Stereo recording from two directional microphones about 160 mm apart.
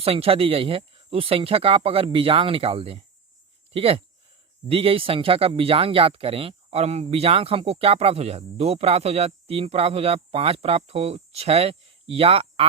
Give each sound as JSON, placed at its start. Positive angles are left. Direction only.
{"t": 0.0, "sound": "speech", "side_deg": -35}